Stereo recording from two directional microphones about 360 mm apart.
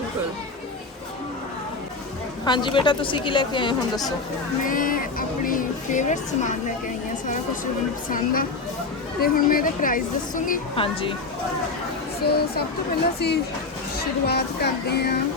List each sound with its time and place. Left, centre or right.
2.4 s a woman's voice: centre
4.6 s speech: left
8.1 s a woman's voice: left
12.2 s a woman's voice: left